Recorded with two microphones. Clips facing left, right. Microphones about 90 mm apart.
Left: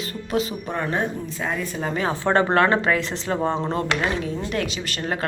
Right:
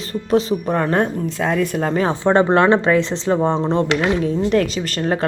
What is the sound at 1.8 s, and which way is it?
Speech, 45° right (ahead or behind).